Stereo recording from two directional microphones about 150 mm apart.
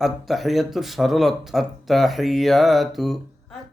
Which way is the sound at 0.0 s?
Centre (ahead or behind).